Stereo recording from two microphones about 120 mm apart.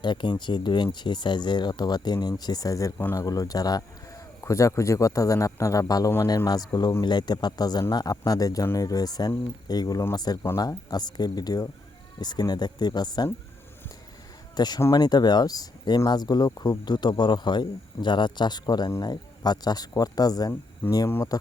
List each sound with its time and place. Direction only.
0.0 s a man's voice: 40° left (ahead or behind)
14.5 s speech: 35° left (ahead or behind)
14.8 s a man's voice: 25° left (ahead or behind)
15.0 s speech: 35° left (ahead or behind)